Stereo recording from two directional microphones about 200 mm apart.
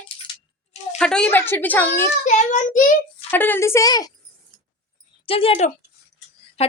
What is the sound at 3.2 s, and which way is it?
Speech, 10° left (ahead or behind).